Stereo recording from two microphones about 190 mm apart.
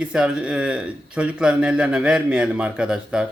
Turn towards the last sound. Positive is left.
turn(degrees=-5)  # may be behind; listen again after turning